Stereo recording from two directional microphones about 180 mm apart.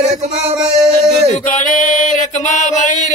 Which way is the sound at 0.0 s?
40° right (ahead or behind).